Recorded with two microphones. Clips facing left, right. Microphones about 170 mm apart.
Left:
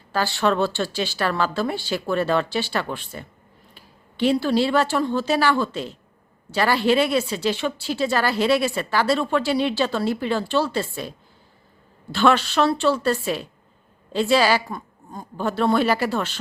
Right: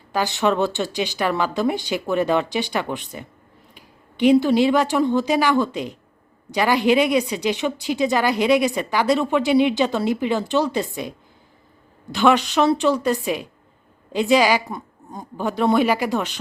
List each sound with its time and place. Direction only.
0.1 s a woman's voice: 15° right (ahead or behind)
12.1 s a woman's voice: 15° right (ahead or behind)